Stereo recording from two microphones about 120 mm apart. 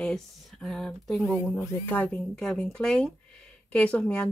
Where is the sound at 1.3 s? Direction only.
20° left (ahead or behind).